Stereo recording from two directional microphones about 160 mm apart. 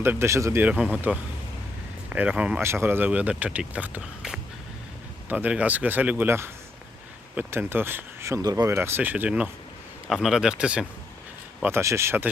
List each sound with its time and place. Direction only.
0.0 s speech: 15° right (ahead or behind)
11.6 s speech: 15° right (ahead or behind)